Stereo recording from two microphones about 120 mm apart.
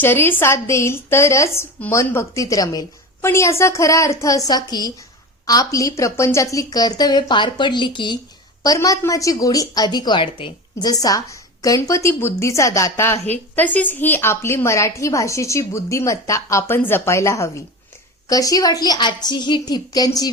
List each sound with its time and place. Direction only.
0.0 s a woman's voice: 15° left (ahead or behind); by 8.2 s 40° left (ahead or behind)
8.6 s a woman's voice: 30° left (ahead or behind)
10.8 s a woman's voice: 30° left (ahead or behind)
13.2 s a woman's voice: 15° left (ahead or behind); by 20.3 s 30° left (ahead or behind)